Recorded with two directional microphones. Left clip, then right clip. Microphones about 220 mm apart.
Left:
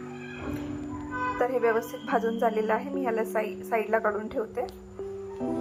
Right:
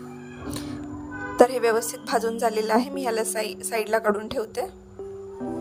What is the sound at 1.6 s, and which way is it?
Speech, 60° right (ahead or behind).